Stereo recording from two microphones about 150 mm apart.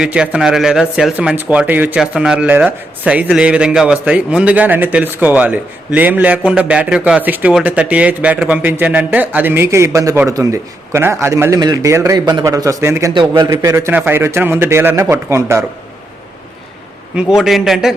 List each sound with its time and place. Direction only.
0.0 s a man's voice: 5° right (ahead or behind)
17.2 s a man's voice: 5° right (ahead or behind)